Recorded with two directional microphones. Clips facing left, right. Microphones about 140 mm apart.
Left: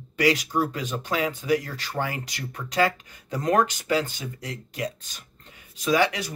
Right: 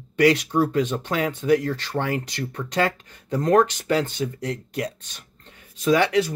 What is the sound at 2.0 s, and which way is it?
Speech, 60° right (ahead or behind).